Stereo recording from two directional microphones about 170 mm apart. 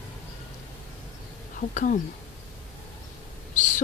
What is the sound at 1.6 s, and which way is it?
Speech, 50° left (ahead or behind).